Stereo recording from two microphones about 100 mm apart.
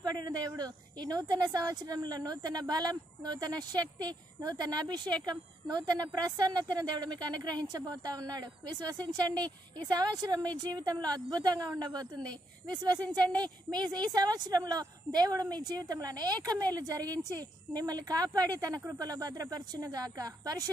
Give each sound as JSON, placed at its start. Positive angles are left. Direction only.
{"t": 0.0, "sound": "a sound", "side_deg": -45}
{"t": 0.5, "sound": "a woman's voice", "side_deg": -40}
{"t": 9.3, "sound": "a woman's voice", "side_deg": 15}
{"t": 9.8, "sound": "a woman's voice", "side_deg": -40}